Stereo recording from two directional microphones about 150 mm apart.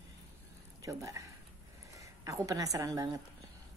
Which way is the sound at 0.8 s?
20° right (ahead or behind).